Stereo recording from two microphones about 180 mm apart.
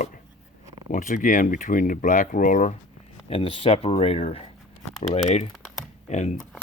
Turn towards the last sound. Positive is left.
turn(degrees=40)  # may be behind; listen again after turning